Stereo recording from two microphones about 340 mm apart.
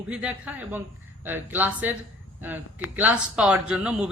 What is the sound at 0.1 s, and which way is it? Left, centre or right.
Speech, centre.